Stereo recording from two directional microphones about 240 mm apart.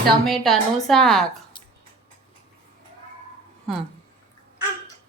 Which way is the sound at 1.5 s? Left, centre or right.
Centre.